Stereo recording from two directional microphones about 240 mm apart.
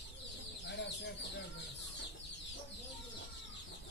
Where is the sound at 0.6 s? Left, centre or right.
Left.